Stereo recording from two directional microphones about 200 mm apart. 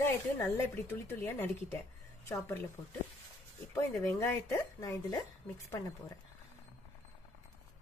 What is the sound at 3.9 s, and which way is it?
Speech, 5° left (ahead or behind).